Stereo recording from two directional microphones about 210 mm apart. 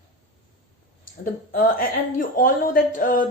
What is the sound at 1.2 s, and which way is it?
A woman's voice, 45° left (ahead or behind).